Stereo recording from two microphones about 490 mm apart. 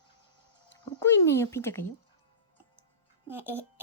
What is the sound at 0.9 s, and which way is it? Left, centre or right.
Speech, centre.